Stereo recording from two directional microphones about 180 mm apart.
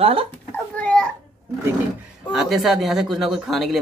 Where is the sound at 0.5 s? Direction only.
5° left (ahead or behind).